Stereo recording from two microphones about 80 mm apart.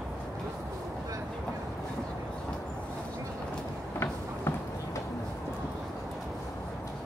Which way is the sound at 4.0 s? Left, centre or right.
Left.